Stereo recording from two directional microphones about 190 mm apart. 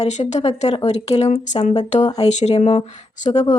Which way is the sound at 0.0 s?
40° left (ahead or behind).